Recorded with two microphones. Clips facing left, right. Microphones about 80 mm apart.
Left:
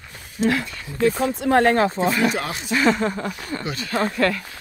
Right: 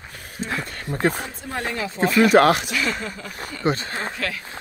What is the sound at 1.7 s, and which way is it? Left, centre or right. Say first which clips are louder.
Speech: left 9 dB; left.